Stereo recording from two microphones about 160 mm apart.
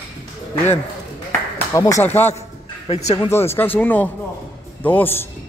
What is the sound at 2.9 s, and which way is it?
Speech, 45° left (ahead or behind).